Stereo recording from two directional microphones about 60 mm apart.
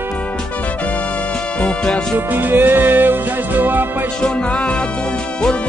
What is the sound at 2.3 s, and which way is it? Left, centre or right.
Music, right.